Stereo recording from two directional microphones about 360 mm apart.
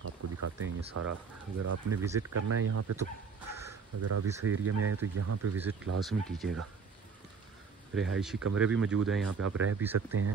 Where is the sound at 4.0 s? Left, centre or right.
Right.